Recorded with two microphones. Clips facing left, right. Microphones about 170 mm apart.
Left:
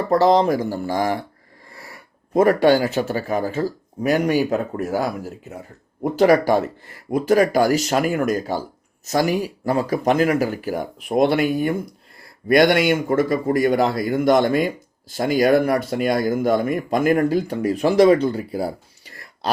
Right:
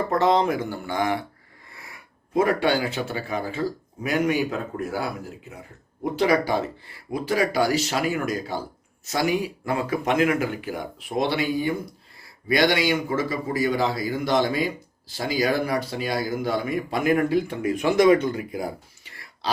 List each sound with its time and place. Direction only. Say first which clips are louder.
0.1 s a man's voice: left 6 dB; 35° left (ahead or behind)
11.1 s a man's voice: left 6 dB; 55° left (ahead or behind)